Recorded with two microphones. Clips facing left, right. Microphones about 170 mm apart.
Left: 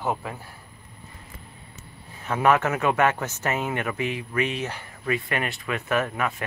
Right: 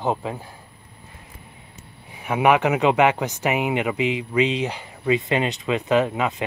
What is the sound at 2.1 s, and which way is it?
Speech, 15° right (ahead or behind).